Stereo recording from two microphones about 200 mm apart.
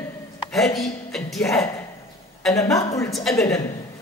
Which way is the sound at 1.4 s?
15° left (ahead or behind).